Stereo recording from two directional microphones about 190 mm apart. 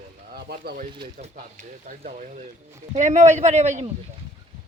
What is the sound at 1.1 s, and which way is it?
A man's voice, 45° right (ahead or behind).